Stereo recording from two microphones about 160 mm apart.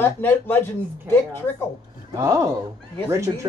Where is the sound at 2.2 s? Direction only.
15° right (ahead or behind).